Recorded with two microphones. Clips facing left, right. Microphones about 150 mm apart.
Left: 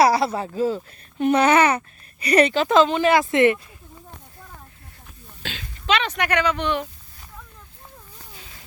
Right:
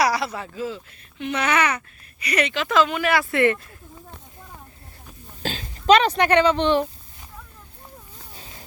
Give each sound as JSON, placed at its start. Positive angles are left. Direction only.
{"t": 0.0, "sound": "speech", "side_deg": 30}
{"t": 5.4, "sound": "speech", "side_deg": -40}
{"t": 8.3, "sound": "a sound", "side_deg": -35}